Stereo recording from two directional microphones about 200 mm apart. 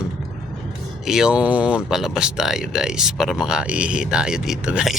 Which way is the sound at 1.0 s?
5° right (ahead or behind).